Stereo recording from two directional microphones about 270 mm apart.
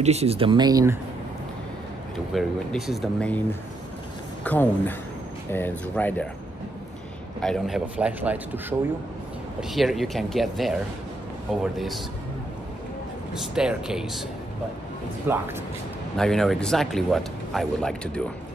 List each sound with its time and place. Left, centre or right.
0.0 s speech: right
2.3 s speech: centre
4.5 s speech: centre
7.4 s speech: centre
13.3 s speech: centre
15.3 s speech: centre